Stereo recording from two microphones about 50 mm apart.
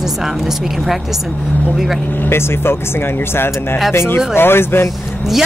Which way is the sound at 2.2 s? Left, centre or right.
Left.